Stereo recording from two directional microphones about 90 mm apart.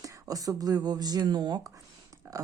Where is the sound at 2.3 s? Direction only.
40° right (ahead or behind).